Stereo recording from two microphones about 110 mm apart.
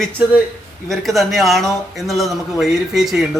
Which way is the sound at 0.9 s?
Centre (ahead or behind).